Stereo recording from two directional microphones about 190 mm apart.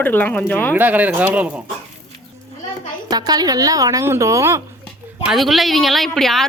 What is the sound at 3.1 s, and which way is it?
Speech, 20° right (ahead or behind).